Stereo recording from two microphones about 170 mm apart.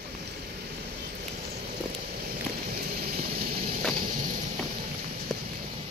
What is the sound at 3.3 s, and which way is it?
Vehicle, 60° right (ahead or behind).